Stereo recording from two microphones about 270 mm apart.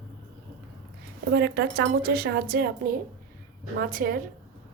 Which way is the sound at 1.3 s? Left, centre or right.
Right.